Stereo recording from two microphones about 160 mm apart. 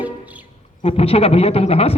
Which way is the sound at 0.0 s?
10° right (ahead or behind).